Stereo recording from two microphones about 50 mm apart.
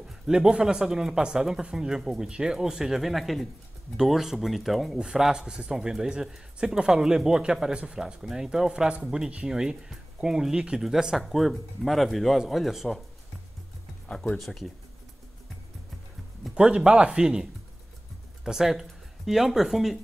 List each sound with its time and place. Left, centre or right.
0.3 s speech: centre
4.9 s speech: centre
11.1 s speech: centre
14.0 s speech: centre
16.5 s speech: centre